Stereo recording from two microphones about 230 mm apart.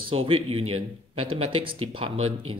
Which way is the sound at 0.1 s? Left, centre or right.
Right.